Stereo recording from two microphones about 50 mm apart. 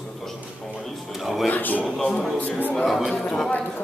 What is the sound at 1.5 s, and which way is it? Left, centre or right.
Speech, left.